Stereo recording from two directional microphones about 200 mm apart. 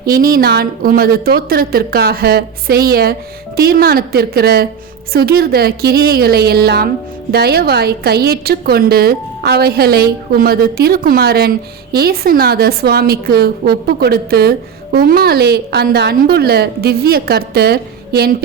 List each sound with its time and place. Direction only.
0.2 s a woman's voice: 45° right (ahead or behind)